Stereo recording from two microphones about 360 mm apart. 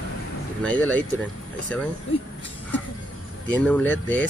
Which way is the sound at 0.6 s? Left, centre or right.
Centre.